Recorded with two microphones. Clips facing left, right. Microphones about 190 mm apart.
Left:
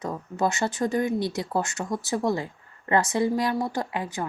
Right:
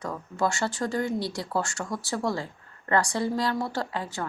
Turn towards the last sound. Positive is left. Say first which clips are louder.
# left 2 dB
turn(degrees=20)  # may be behind; listen again after turning